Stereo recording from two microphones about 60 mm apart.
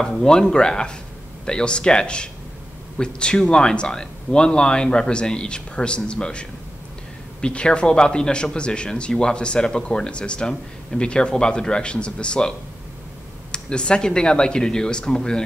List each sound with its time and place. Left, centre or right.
0.0 s a man's voice: centre
7.4 s a man's voice: centre
10.5 s a man's voice: centre